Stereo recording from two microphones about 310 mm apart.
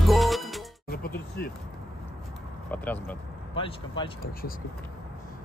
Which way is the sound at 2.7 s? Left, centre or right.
Centre.